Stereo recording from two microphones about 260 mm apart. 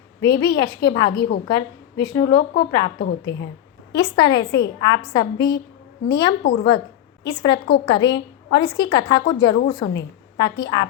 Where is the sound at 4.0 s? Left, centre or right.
Centre.